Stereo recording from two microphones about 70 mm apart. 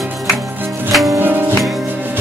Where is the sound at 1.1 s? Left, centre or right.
Right.